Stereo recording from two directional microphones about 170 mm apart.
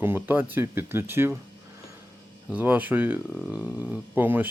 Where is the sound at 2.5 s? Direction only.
10° right (ahead or behind).